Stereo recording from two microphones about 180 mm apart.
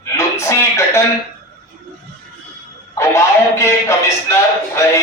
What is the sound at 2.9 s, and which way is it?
A man's voice, 15° left (ahead or behind).